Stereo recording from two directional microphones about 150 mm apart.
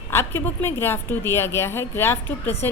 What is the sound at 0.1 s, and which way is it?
A woman's voice, 15° left (ahead or behind).